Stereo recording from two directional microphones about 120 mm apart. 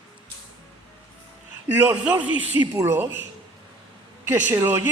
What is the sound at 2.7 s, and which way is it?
Speech, 20° right (ahead or behind).